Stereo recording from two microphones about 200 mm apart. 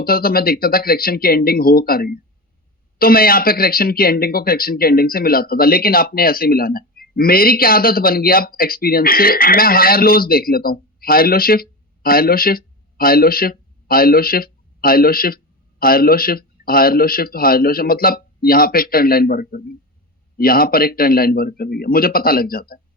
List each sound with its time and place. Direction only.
0.0 s speech: 50° left (ahead or behind)